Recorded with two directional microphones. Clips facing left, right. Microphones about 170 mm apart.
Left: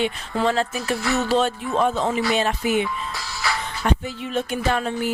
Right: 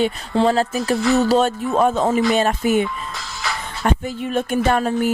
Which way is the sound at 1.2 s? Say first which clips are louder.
Right 4 dB; 40° right (ahead or behind).